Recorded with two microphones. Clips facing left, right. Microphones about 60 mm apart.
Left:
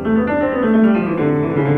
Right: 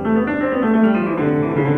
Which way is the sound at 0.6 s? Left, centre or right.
Centre.